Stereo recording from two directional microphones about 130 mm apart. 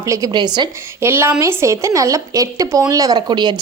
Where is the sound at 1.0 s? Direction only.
20° right (ahead or behind); by 3.5 s 35° right (ahead or behind).